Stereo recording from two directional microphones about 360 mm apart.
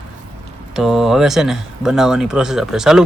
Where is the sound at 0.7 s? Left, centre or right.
Centre.